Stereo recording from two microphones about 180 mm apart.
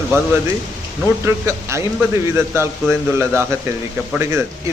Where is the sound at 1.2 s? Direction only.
15° right (ahead or behind).